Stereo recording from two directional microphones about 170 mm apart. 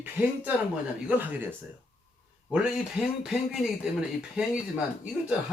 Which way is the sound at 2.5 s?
5° right (ahead or behind).